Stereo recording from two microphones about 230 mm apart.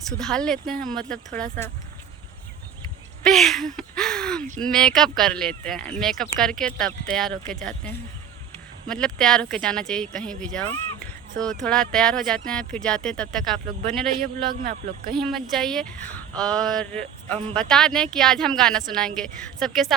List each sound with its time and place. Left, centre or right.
0.2 s speech: centre
3.2 s speech: centre
14.5 s speech: right
15.1 s speech: centre